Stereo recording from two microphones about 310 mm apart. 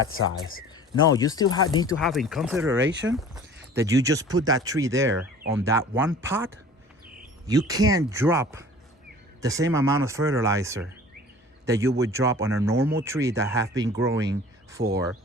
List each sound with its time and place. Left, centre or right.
0.0 s speech: left
1.1 s speech: centre
2.0 s speech: centre
2.7 s speech: right
3.1 s speech: centre
7.7 s speech: centre